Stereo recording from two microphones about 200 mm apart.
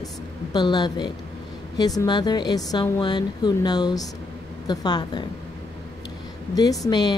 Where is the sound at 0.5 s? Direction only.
20° left (ahead or behind).